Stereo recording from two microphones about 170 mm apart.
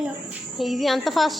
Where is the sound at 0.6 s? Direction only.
Centre (ahead or behind).